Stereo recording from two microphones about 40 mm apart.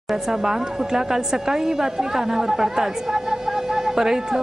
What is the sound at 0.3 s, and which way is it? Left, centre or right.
A woman's voice, centre.